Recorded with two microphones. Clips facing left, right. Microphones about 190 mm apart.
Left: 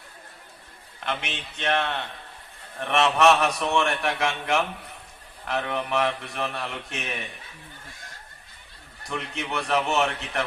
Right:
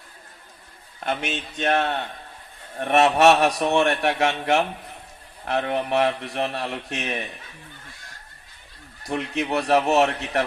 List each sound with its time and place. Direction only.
0.9 s a man's voice: 40° right (ahead or behind)
9.0 s a man's voice: 35° right (ahead or behind)